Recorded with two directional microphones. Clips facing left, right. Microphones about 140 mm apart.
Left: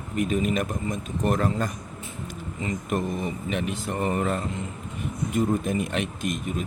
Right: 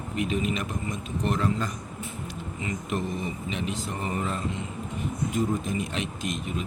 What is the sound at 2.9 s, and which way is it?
Speech, 45° left (ahead or behind).